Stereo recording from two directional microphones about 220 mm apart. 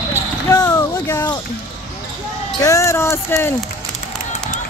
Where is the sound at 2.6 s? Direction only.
15° left (ahead or behind).